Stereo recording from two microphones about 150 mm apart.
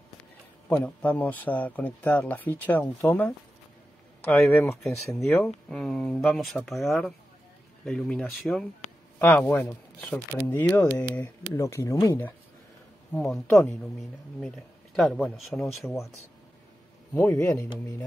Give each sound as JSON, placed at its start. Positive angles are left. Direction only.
{"t": 0.7, "sound": "speech", "side_deg": 10}
{"t": 4.4, "sound": "speech", "side_deg": 5}
{"t": 13.1, "sound": "speech", "side_deg": 5}
{"t": 17.1, "sound": "speech", "side_deg": 15}